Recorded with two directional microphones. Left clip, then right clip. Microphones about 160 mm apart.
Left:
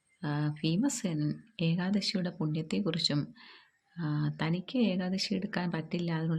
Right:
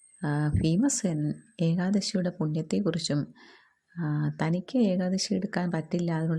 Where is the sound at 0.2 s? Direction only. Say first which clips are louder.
Right 5 dB; 50° right (ahead or behind).